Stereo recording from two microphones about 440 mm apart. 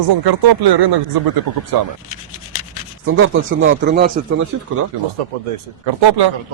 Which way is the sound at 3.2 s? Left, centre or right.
Right.